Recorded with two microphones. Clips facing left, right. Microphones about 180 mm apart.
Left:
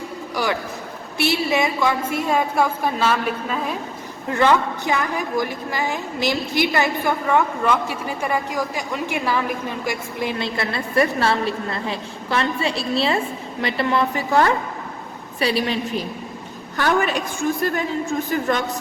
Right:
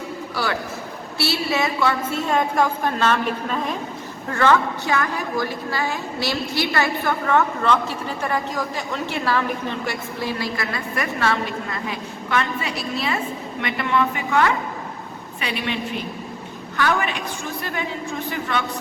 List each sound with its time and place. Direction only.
0.4 s a woman's voice: 15° left (ahead or behind)
4.3 s a woman's voice: 15° left (ahead or behind); by 18.6 s 40° left (ahead or behind)